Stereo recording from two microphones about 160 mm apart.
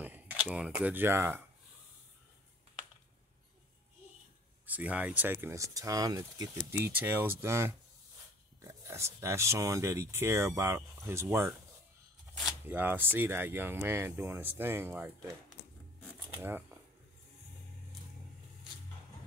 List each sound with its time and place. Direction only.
0.0 s speech: 10° right (ahead or behind)
4.6 s speech: 10° right (ahead or behind)
6.7 s speech: 10° right (ahead or behind)
16.3 s speech: 10° right (ahead or behind)